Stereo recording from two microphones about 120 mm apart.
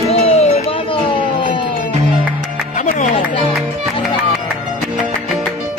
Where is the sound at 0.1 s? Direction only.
60° left (ahead or behind).